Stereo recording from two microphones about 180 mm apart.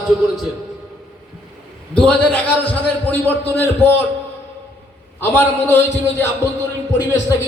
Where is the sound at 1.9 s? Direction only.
5° left (ahead or behind).